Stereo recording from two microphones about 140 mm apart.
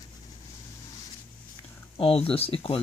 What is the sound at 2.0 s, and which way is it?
Speech, 40° left (ahead or behind).